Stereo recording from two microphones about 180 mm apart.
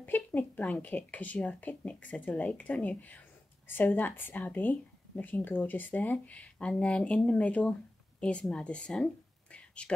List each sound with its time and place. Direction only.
0.0 s speech: 10° left (ahead or behind)